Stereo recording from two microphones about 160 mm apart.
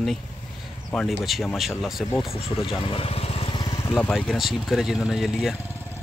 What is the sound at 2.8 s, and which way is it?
Vehicle, 35° left (ahead or behind).